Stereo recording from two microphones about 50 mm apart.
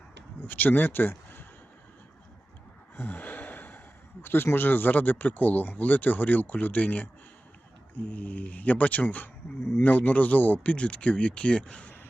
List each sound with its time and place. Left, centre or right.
0.4 s speech: left
2.9 s sigh: left
4.5 s speech: left